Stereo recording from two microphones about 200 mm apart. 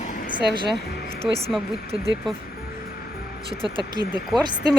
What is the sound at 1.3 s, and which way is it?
Speech, 30° right (ahead or behind).